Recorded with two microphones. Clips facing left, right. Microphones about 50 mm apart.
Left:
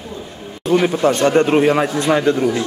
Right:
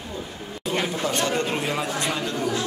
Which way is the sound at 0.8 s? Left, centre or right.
Left.